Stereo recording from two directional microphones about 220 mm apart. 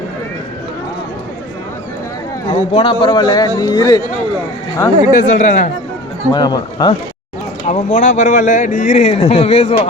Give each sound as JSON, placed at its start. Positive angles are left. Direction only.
{"t": 2.5, "sound": "a man's voice", "side_deg": 25}
{"t": 5.1, "sound": "speech", "side_deg": 40}
{"t": 6.3, "sound": "a man's voice", "side_deg": 20}
{"t": 7.7, "sound": "speech", "side_deg": 35}